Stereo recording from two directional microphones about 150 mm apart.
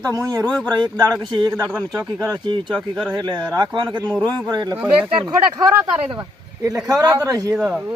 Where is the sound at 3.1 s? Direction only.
30° right (ahead or behind).